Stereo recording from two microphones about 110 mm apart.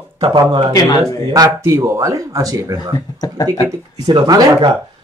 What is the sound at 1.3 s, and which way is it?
Speech, 30° right (ahead or behind).